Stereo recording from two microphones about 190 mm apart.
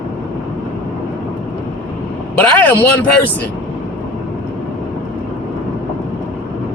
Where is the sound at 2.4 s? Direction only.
10° left (ahead or behind).